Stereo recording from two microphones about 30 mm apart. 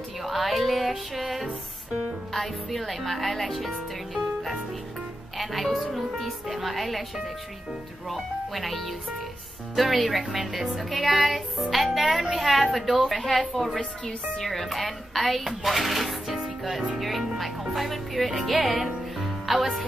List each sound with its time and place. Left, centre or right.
0.2 s music: centre
2.3 s speech: centre
8.1 s speech: centre
14.0 s speech: centre
14.5 s speech: centre
16.3 s music: centre
17.0 s speech: centre
19.1 s music: centre